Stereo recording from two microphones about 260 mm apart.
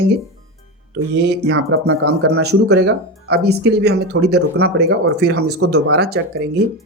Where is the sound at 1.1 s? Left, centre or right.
Right.